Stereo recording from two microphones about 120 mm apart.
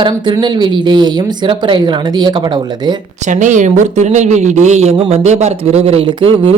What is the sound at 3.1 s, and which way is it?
Speech, 85° right.